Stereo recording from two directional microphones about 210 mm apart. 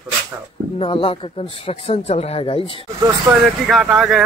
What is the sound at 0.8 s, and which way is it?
Speech, 25° left (ahead or behind).